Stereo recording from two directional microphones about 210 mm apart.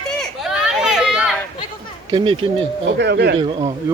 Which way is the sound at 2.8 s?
55° right (ahead or behind).